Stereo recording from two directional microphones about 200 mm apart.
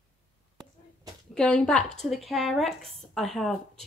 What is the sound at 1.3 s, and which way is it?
Speech, 5° left (ahead or behind).